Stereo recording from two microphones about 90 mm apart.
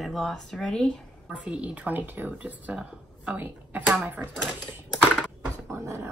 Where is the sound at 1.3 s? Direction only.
15° right (ahead or behind).